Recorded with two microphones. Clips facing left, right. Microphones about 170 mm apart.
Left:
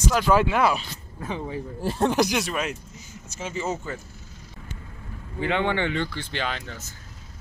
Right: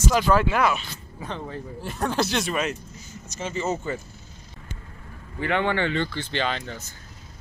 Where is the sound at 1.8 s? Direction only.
30° left (ahead or behind).